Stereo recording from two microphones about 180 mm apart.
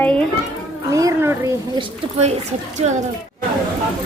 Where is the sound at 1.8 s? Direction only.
35° right (ahead or behind).